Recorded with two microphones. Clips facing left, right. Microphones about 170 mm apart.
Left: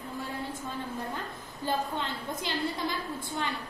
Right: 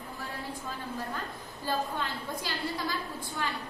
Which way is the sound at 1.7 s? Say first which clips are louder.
Left 1 dB; 20° left (ahead or behind).